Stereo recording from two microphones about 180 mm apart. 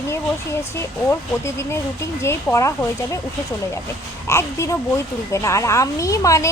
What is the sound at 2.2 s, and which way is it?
Speech, 15° left (ahead or behind).